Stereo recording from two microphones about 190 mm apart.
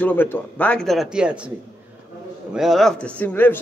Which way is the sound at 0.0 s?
10° left (ahead or behind).